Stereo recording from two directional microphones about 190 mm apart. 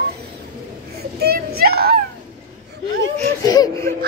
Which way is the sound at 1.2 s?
55° right (ahead or behind).